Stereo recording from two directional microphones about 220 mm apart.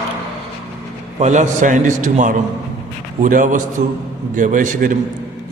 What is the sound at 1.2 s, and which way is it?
A man's voice, 35° right (ahead or behind).